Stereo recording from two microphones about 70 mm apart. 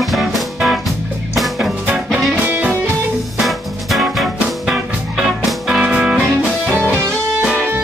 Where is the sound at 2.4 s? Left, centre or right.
Right.